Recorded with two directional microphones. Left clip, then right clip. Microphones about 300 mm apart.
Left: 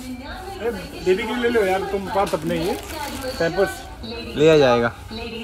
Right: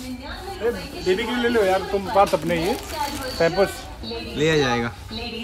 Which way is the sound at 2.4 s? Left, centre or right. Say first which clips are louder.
Right 1 dB; centre.